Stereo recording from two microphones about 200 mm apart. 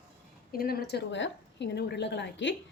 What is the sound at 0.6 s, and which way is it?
A woman's voice, 50° left (ahead or behind).